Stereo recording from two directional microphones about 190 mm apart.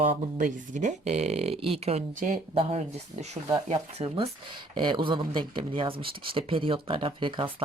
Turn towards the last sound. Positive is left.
turn(degrees=-25)  # may be behind; listen again after turning